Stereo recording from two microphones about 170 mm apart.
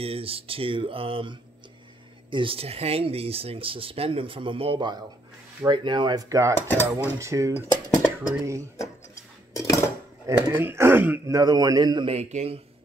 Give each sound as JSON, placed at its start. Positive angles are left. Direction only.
{"t": 0.0, "sound": "speech", "side_deg": -35}
{"t": 6.7, "sound": "cutlery", "side_deg": 10}
{"t": 7.2, "sound": "speech", "side_deg": -15}
{"t": 7.5, "sound": "cutlery", "side_deg": 15}
{"t": 8.7, "sound": "a sound", "side_deg": 20}
{"t": 10.2, "sound": "speech", "side_deg": -15}